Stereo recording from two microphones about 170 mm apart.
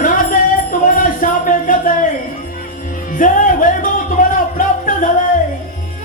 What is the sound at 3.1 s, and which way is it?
Music, 50° left (ahead or behind).